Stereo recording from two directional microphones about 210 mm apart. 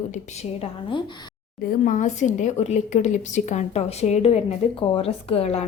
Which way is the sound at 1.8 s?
35° left (ahead or behind).